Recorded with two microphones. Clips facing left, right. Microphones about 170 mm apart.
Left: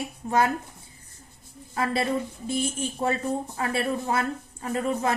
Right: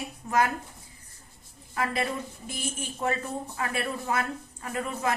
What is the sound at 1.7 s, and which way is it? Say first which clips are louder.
A woman's voice: left 4 dB; 30° left (ahead or behind).